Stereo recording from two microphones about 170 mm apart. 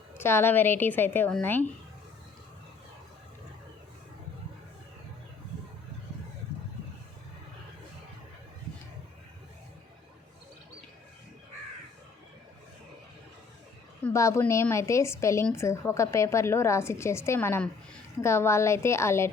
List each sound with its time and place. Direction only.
0.2 s a woman's voice: 15° left (ahead or behind)
14.0 s a woman's voice: 15° left (ahead or behind)